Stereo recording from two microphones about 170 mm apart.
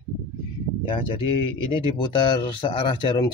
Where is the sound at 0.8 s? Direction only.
30° left (ahead or behind).